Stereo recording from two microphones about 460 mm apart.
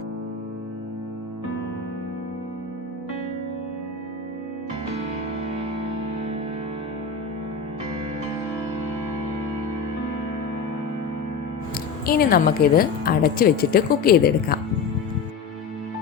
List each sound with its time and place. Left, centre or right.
12.0 s a woman's voice: centre